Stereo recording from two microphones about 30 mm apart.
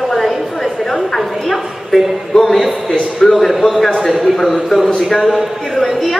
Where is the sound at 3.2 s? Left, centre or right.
Centre.